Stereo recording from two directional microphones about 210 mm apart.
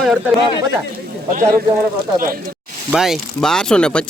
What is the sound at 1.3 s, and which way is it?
Speech, 40° right (ahead or behind).